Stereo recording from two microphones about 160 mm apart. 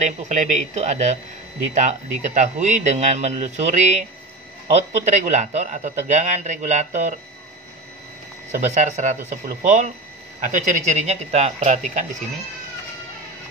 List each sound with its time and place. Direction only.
0.0 s a man's voice: 45° right (ahead or behind)
8.5 s a man's voice: 50° right (ahead or behind)